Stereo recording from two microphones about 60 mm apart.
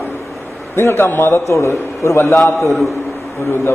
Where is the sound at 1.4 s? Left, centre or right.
Left.